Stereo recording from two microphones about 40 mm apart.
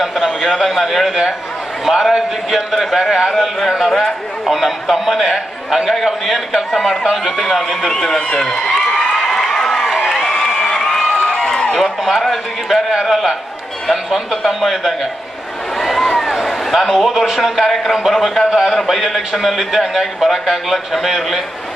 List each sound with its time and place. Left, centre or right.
0.2 s a man's voice: centre
0.5 s a man's voice: centre
1.0 s a man's voice: centre
8.8 s a sound: centre
9.1 s run: centre
10.2 s crowd: centre
11.8 s a man's voice: centre
15.8 s a sound: centre
18.1 s a man's voice: centre